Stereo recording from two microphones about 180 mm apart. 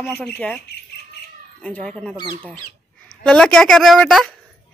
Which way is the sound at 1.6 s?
5° left (ahead or behind).